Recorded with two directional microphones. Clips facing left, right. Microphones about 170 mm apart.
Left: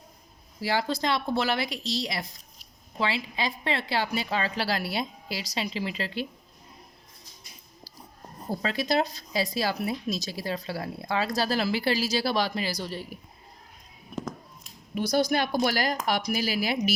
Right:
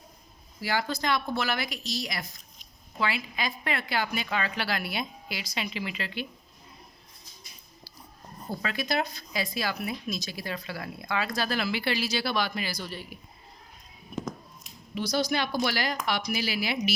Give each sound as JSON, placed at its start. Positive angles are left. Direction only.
{"t": 0.6, "sound": "speech", "side_deg": 30}
{"t": 8.4, "sound": "speech", "side_deg": 35}
{"t": 14.9, "sound": "a woman's voice", "side_deg": 55}